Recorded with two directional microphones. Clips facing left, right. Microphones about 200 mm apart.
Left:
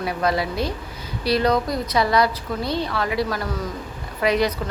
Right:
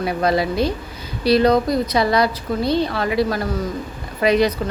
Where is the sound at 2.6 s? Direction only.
70° right (ahead or behind).